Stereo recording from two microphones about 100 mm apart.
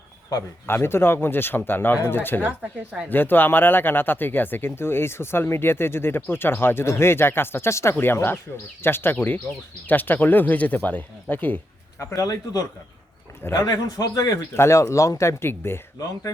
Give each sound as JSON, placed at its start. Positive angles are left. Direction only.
{"t": 0.7, "sound": "speech", "side_deg": 25}
{"t": 2.4, "sound": "speech", "side_deg": -15}
{"t": 3.1, "sound": "speech", "side_deg": 20}
{"t": 11.9, "sound": "a man's voice", "side_deg": 35}
{"t": 14.5, "sound": "speech", "side_deg": 25}